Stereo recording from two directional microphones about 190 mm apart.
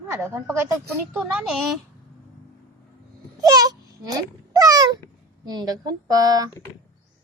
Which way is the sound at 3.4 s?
20° right (ahead or behind).